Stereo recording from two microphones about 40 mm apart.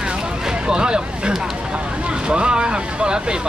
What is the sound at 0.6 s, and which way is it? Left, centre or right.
Speech, centre.